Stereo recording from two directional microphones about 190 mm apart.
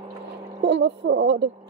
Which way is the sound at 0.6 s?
70° right (ahead or behind).